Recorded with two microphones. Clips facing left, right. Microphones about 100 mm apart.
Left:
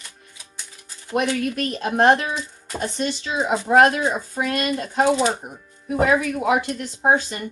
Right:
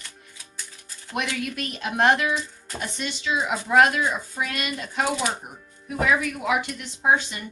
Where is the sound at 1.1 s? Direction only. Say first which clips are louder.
Left 7 dB; 35° left (ahead or behind).